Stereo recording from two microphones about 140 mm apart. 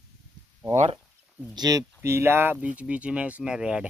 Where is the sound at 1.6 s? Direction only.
25° right (ahead or behind).